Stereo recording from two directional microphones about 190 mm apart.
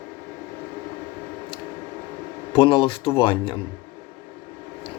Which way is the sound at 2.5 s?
25° left (ahead or behind).